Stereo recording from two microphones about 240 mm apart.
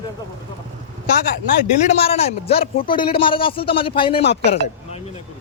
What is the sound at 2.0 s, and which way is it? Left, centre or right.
Speech, left.